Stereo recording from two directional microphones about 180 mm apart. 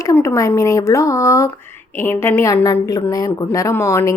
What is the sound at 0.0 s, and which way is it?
A woman's voice, 15° left (ahead or behind).